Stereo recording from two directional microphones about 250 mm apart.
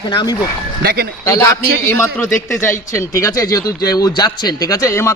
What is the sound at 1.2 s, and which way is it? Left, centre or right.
Speech, centre.